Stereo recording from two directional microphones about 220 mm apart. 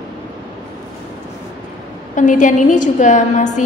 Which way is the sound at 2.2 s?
35° left (ahead or behind).